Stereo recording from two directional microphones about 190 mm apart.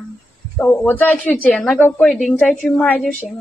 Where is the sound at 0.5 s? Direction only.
10° left (ahead or behind).